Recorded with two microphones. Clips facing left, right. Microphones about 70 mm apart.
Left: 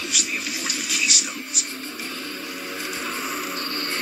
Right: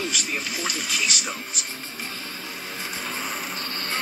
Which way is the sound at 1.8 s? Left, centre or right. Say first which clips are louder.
Left 2 dB; left.